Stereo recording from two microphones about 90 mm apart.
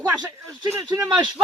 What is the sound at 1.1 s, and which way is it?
Speech, 55° right (ahead or behind).